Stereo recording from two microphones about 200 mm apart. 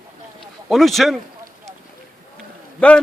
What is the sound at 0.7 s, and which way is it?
Speech, centre (ahead or behind).